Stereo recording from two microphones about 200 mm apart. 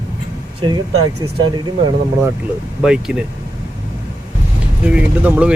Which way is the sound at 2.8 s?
5° right (ahead or behind).